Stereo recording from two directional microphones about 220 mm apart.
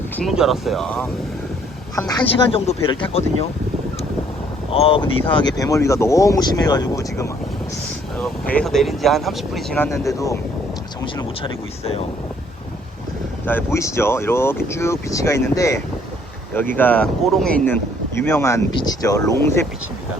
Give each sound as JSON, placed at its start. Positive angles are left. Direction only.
{"t": 0.2, "sound": "speech", "side_deg": 0}
{"t": 2.0, "sound": "speech", "side_deg": 20}
{"t": 4.7, "sound": "speech", "side_deg": 25}
{"t": 8.2, "sound": "speech", "side_deg": 5}
{"t": 13.4, "sound": "speech", "side_deg": 10}